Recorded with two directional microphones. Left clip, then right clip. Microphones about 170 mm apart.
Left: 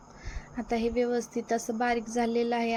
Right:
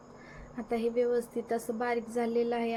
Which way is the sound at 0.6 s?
20° left (ahead or behind).